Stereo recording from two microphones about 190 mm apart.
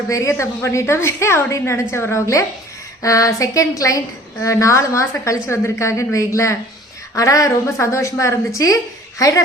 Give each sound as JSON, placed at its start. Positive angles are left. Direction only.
{"t": 0.1, "sound": "a woman's voice", "side_deg": 15}